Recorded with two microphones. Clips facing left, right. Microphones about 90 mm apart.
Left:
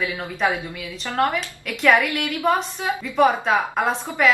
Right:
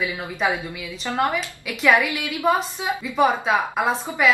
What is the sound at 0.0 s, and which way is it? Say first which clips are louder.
Speech: left 1 dB; 5° right (ahead or behind).